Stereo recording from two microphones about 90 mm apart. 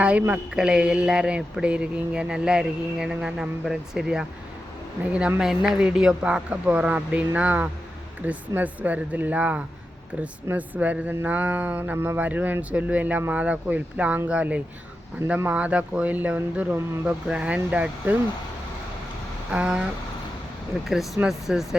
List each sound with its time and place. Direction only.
0.0 s speech: 15° right (ahead or behind)
5.4 s speech: 5° right (ahead or behind)
19.5 s speech: 10° right (ahead or behind)